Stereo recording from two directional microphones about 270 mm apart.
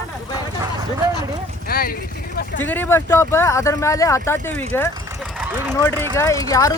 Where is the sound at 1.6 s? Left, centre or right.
Left.